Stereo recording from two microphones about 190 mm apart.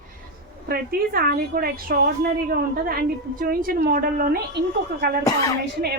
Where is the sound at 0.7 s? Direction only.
50° right (ahead or behind).